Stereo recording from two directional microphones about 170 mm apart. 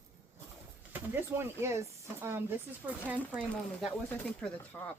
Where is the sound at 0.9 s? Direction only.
15° right (ahead or behind).